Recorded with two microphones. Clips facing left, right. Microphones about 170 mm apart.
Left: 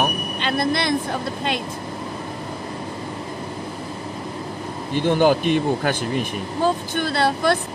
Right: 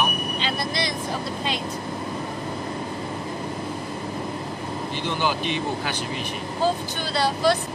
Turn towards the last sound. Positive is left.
turn(degrees=55)  # may be behind; listen again after turning